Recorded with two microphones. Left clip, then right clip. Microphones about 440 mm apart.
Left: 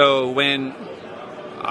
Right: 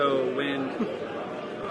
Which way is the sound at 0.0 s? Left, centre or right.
Left.